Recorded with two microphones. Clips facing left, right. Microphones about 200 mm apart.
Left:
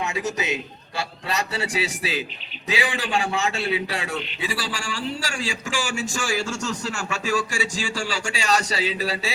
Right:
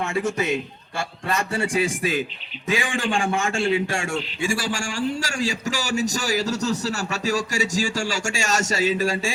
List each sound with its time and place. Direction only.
0.0 s a man's voice: 50° right (ahead or behind)